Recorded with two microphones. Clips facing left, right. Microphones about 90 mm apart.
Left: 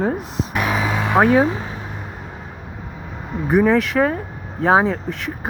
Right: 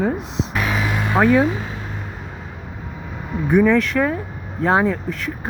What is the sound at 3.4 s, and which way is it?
Speech, 5° left (ahead or behind).